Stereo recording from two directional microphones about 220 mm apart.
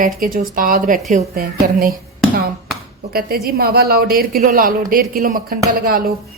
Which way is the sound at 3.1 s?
45° right (ahead or behind).